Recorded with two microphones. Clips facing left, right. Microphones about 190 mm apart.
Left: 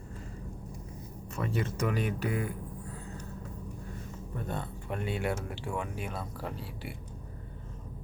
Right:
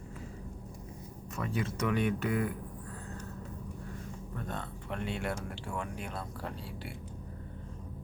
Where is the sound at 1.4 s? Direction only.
5° left (ahead or behind).